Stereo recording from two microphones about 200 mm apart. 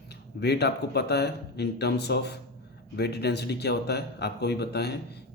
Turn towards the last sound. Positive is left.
turn(degrees=55)  # may be behind; listen again after turning